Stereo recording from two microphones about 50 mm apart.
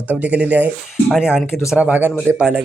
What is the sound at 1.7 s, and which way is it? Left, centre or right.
Speech, right.